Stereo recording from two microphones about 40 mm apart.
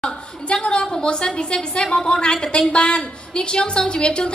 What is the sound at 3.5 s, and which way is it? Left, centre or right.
Speech, left.